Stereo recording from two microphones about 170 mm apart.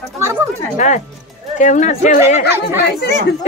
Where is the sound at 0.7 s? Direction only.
45° left (ahead or behind).